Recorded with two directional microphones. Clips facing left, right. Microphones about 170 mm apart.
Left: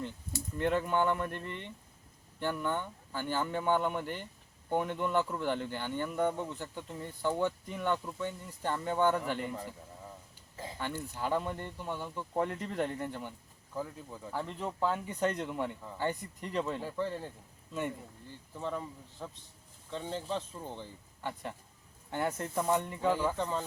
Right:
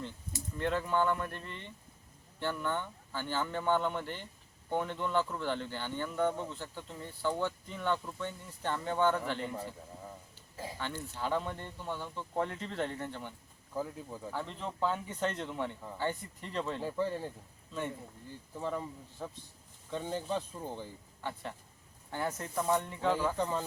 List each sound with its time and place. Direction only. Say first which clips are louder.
0.6 s speech: left 1 dB; 15° left (ahead or behind)
2.4 s speech: left 1 dB; 15° left (ahead or behind)
10.8 s speech: left 3 dB; 10° left (ahead or behind)
13.7 s speech: right 2 dB; 10° right (ahead or behind)
14.3 s speech: left 3 dB; 10° left (ahead or behind)
16.8 s speech: right 2 dB; 15° right (ahead or behind)
18.5 s speech: right 1 dB; 10° right (ahead or behind)
22.1 s speech: left 2 dB; 25° left (ahead or behind); by 23.6 s 5° right (ahead or behind)